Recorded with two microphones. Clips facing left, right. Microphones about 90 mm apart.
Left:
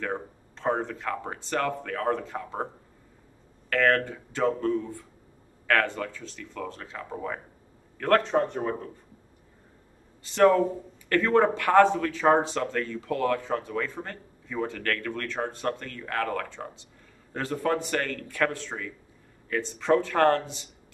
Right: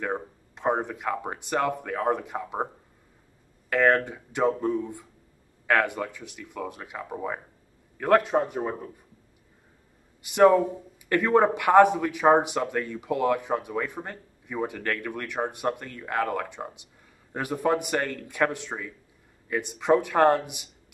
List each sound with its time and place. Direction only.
0.0 s speech: 15° right (ahead or behind)
3.7 s a man's voice: 20° right (ahead or behind)
10.2 s a man's voice: 15° right (ahead or behind)